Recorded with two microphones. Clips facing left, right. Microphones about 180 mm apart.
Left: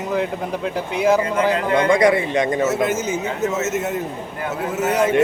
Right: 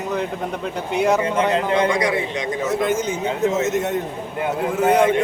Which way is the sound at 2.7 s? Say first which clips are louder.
Even; 5° left (ahead or behind).